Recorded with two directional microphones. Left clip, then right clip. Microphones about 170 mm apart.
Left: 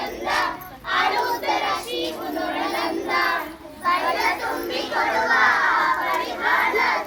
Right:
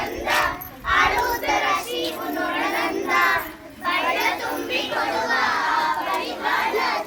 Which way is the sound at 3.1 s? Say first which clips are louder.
Right 3 dB; 25° right (ahead or behind).